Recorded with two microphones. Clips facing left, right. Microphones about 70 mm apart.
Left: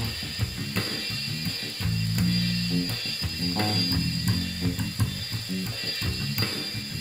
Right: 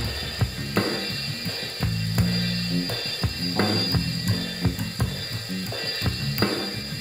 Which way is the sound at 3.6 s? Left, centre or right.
Right.